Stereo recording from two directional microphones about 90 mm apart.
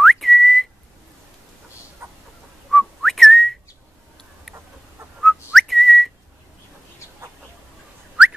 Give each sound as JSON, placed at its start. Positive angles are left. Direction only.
{"t": 0.0, "sound": "whistling", "side_deg": 0}
{"t": 2.0, "sound": "chicken", "side_deg": -30}
{"t": 2.7, "sound": "whistling", "side_deg": 0}
{"t": 5.2, "sound": "whistling", "side_deg": 0}